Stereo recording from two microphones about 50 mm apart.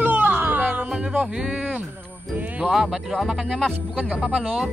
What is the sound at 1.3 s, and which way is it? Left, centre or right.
Speech, centre.